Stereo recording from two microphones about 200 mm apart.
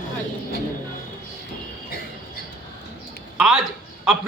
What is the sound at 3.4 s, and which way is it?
Speech, centre (ahead or behind).